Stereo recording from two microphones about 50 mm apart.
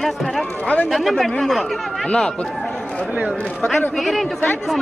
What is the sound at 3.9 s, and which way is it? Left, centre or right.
Speech, centre.